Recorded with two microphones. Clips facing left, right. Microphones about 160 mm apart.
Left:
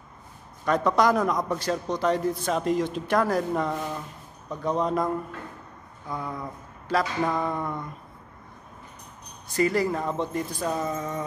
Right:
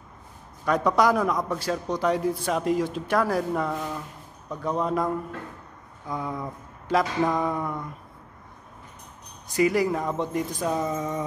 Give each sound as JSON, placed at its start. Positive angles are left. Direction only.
{"t": 0.7, "sound": "speech", "side_deg": -10}
{"t": 6.1, "sound": "speech", "side_deg": -20}
{"t": 9.5, "sound": "speech", "side_deg": -15}
{"t": 11.0, "sound": "speech", "side_deg": -20}